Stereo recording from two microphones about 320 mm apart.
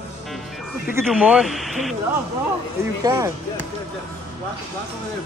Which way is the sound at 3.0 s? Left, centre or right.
Centre.